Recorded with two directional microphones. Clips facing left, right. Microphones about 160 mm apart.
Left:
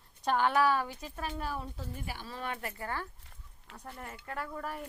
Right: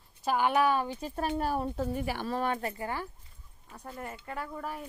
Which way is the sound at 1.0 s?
35° right (ahead or behind).